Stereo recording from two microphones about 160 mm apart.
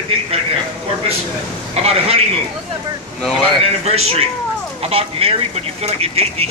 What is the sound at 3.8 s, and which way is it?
Speech, 40° right (ahead or behind).